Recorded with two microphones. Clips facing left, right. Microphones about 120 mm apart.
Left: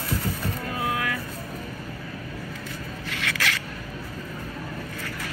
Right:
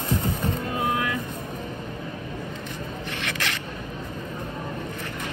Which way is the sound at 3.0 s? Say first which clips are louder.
Left 2 dB; 25° right (ahead or behind).